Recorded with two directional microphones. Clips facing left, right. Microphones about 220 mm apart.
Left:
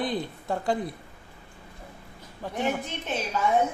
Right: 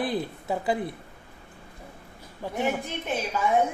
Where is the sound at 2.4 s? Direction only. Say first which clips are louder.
Right 1 dB; 10° right (ahead or behind).